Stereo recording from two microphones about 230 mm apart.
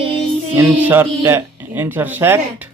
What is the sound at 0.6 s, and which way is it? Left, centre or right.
Speech, centre.